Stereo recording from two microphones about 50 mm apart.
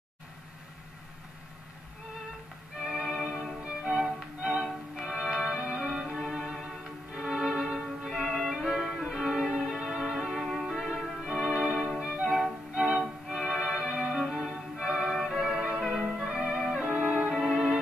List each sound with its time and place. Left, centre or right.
2.9 s music: centre
6.4 s music: centre
6.8 s music: centre
7.5 s violin: centre
9.2 s music: centre
14.8 s violin: centre
15.4 s music: centre
17.0 s music: centre